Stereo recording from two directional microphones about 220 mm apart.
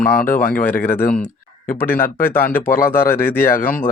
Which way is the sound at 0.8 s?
10° left (ahead or behind).